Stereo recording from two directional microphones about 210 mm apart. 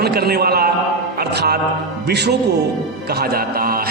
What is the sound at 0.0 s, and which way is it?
A man's voice, 50° right (ahead or behind).